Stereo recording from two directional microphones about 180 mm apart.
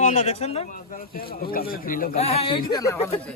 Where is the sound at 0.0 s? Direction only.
35° left (ahead or behind).